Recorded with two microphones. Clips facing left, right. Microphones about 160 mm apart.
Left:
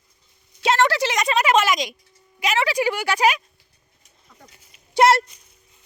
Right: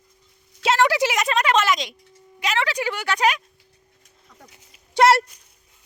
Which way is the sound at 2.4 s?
10° left (ahead or behind).